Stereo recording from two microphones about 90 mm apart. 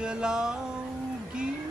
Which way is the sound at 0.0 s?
10° right (ahead or behind).